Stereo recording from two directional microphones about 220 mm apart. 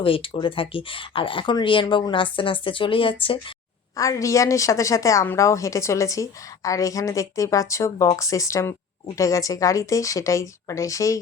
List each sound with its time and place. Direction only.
0.0 s a woman's voice: 25° left (ahead or behind)